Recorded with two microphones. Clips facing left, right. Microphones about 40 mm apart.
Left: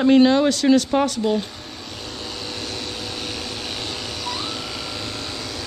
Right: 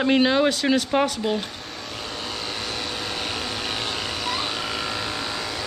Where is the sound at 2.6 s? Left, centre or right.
Centre.